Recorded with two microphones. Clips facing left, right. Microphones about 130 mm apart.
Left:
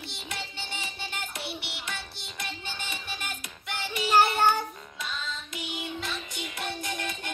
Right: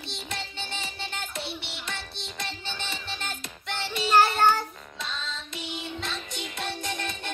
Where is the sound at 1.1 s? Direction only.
25° right (ahead or behind).